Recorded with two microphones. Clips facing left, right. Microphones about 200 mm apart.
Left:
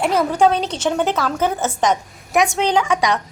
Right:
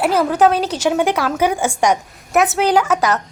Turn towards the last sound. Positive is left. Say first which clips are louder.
# right 2 dB
turn(degrees=-5)  # may be behind; listen again after turning